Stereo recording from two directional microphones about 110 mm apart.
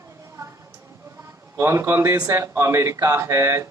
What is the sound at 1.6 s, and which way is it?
Speech, 25° right (ahead or behind).